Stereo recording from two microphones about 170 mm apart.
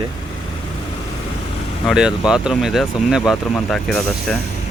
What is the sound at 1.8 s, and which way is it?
Speech, 5° right (ahead or behind).